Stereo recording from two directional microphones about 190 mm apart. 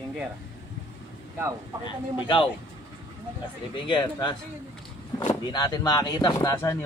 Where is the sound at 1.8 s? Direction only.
25° left (ahead or behind).